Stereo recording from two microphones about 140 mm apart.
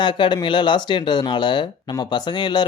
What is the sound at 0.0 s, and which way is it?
Speech, 35° left (ahead or behind).